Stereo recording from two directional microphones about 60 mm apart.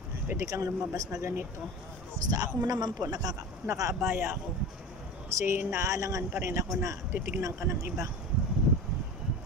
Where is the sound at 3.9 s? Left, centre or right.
Right.